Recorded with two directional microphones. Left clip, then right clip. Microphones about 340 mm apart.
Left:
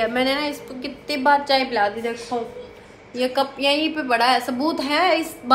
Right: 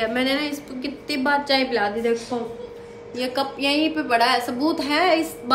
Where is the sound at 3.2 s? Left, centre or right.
Centre.